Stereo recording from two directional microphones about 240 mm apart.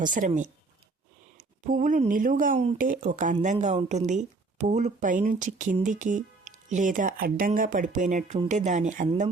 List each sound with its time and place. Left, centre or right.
0.0 s speech: right